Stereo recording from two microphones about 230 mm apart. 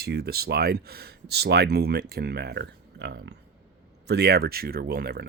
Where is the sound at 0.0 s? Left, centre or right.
Right.